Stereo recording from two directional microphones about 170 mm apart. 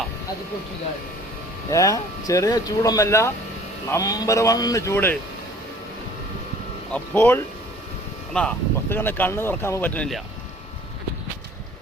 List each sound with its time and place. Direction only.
1.7 s speech: 20° left (ahead or behind)
6.9 s speech: 10° left (ahead or behind)